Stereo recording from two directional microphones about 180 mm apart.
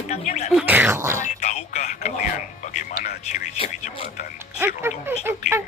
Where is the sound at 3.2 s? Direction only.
40° left (ahead or behind).